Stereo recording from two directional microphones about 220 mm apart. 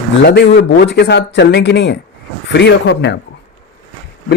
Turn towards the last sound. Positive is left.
turn(degrees=50)  # may be behind; listen again after turning